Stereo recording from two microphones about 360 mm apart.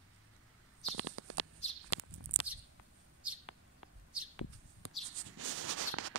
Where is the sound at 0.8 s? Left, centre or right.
Right.